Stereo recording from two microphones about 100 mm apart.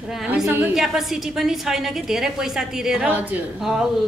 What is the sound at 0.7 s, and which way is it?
A woman's voice, centre (ahead or behind).